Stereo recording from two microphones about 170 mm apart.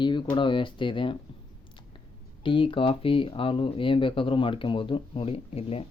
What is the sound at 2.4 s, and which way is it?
Speech, 30° left (ahead or behind).